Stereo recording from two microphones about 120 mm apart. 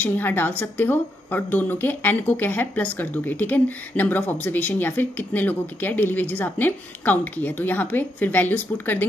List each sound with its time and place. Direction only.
0.0 s a woman's voice: 15° left (ahead or behind)